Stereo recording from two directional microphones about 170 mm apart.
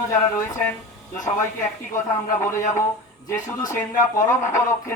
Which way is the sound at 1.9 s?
15° left (ahead or behind).